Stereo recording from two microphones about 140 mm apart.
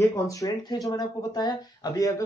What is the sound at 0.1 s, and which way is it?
A man's voice, 25° left (ahead or behind).